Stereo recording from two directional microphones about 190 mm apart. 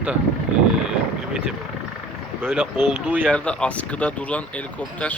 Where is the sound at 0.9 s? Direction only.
5° right (ahead or behind).